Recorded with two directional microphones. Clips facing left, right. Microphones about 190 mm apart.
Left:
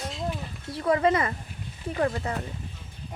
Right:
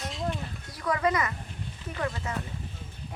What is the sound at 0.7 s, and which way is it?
Speech, 30° left (ahead or behind).